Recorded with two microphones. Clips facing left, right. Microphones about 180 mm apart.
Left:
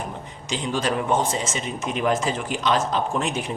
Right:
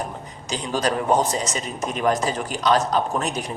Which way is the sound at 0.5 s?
40° right (ahead or behind).